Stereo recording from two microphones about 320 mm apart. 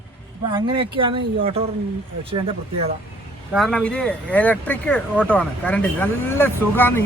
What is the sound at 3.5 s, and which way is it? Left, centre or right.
Speech, centre.